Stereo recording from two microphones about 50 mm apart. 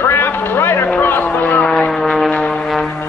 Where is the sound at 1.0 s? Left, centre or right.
Left.